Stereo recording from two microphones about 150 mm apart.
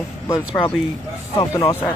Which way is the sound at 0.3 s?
15° left (ahead or behind).